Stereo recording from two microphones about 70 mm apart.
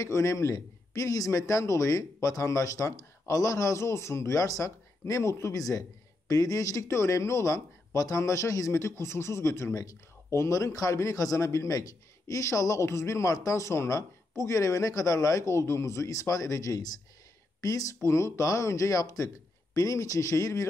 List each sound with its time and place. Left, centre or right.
0.0 s a man's voice: left